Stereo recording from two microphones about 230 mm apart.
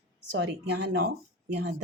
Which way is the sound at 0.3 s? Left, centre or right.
Right.